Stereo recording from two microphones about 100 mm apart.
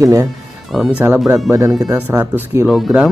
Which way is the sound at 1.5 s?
35° right (ahead or behind).